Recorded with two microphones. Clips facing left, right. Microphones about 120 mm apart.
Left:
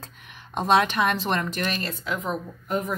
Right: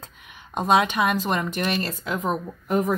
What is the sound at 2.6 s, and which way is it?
Speech, 80° right.